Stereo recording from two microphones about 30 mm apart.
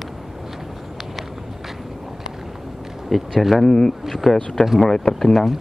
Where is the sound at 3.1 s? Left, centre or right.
Centre.